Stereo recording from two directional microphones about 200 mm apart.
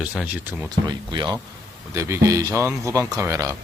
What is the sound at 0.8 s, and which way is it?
Speech, 20° right (ahead or behind).